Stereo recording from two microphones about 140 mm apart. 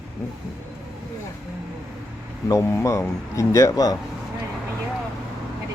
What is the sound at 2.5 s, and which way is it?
Speech, 20° left (ahead or behind).